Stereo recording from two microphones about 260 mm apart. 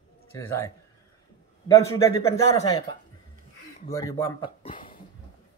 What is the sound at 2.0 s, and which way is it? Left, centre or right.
Speech, centre.